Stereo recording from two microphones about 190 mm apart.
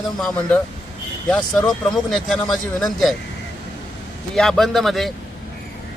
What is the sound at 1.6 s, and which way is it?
A man's voice, centre (ahead or behind).